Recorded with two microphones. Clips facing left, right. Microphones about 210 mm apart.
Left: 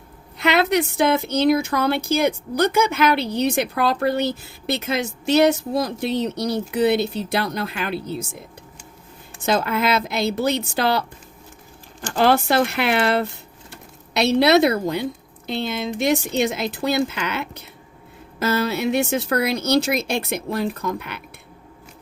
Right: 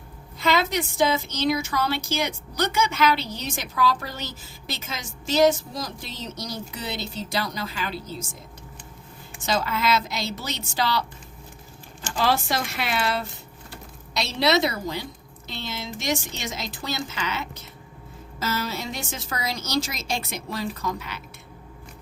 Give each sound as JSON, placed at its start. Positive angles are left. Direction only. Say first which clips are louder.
{"t": 0.3, "sound": "a woman's voice", "louder": "left 5 dB", "side_deg": 65}
{"t": 9.4, "sound": "a woman's voice", "louder": "left 5 dB", "side_deg": 55}
{"t": 12.1, "sound": "a woman's voice", "louder": "left 7 dB", "side_deg": 60}